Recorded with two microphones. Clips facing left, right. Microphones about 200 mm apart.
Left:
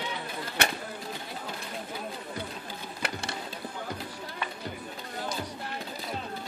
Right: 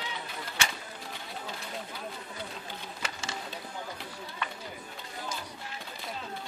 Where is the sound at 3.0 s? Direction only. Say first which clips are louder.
Left 5 dB; 65° left (ahead or behind).